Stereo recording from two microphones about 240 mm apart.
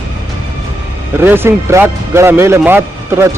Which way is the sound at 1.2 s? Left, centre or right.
Centre.